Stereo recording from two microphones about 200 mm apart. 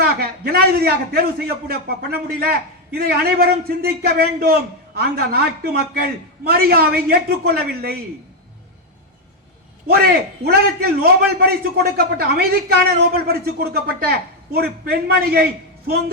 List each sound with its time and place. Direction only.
0.0 s a man's voice: 50° right (ahead or behind)
9.8 s a man's voice: 50° right (ahead or behind)